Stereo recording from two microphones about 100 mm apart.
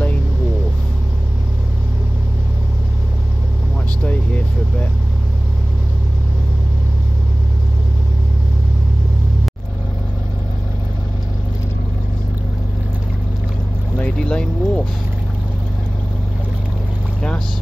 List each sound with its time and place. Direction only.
13.9 s vehicle: 10° left (ahead or behind)